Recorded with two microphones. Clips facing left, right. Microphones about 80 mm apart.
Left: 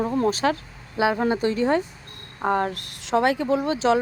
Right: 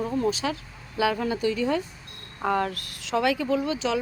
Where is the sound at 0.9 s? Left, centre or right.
Left.